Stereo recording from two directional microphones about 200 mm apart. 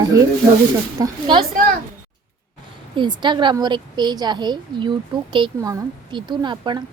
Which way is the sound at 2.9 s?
25° right (ahead or behind).